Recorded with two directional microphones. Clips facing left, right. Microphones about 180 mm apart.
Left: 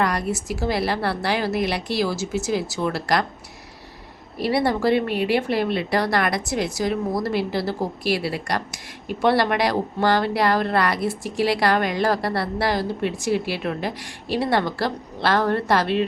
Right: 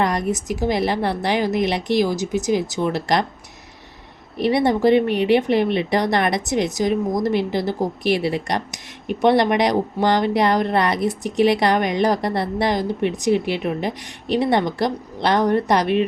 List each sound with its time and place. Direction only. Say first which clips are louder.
0.0 s speech: right 2 dB; 20° right (ahead or behind)
4.4 s speech: right 3 dB; 20° right (ahead or behind)